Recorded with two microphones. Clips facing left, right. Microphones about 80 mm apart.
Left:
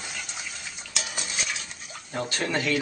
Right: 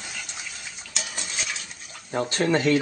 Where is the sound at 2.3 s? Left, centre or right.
Right.